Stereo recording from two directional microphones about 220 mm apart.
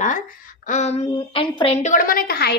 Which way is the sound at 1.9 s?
40° left (ahead or behind).